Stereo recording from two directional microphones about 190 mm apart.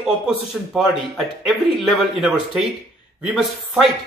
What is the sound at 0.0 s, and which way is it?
Speech, centre (ahead or behind).